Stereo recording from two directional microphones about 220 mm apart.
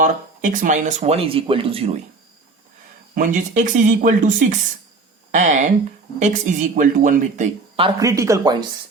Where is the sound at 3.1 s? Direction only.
35° right (ahead or behind).